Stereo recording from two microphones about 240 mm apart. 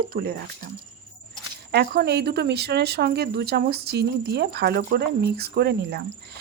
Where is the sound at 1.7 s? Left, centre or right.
Right.